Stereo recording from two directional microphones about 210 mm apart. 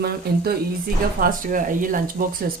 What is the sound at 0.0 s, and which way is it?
Speech, 50° right (ahead or behind).